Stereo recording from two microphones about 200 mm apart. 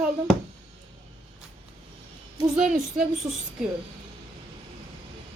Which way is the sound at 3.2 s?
20° right (ahead or behind).